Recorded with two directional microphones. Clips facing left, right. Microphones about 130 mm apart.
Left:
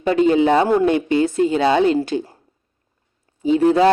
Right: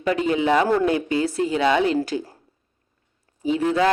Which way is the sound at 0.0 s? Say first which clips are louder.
Left 6 dB; 30° left (ahead or behind).